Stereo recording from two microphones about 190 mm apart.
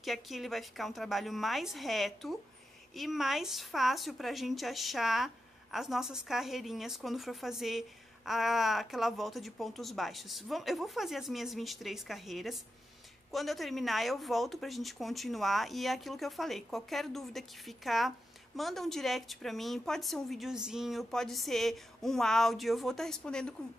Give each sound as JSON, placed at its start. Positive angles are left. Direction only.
{"t": 0.0, "sound": "a woman's voice", "side_deg": 0}